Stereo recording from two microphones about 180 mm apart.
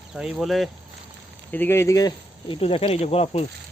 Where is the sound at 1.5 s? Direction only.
10° left (ahead or behind); by 3.4 s 35° left (ahead or behind).